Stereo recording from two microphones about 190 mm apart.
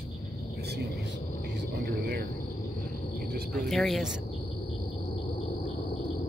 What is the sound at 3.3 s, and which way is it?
Cricket, 55° right (ahead or behind).